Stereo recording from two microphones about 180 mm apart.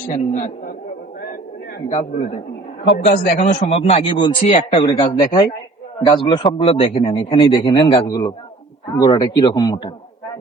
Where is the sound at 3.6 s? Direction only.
35° left (ahead or behind).